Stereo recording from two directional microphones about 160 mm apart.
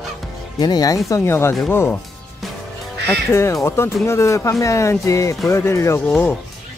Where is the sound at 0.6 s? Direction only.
25° left (ahead or behind).